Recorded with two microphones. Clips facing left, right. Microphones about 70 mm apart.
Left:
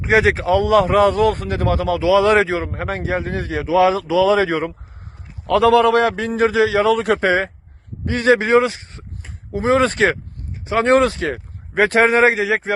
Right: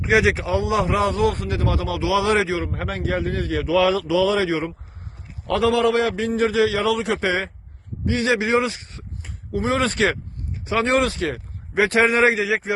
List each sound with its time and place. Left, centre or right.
0.0 s a man's voice: left
4.4 s speech: left
5.5 s a man's voice: left
7.0 s a man's voice: left
8.6 s a man's voice: left